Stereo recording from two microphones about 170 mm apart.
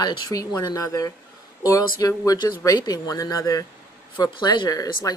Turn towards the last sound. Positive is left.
turn(degrees=20)  # may be behind; listen again after turning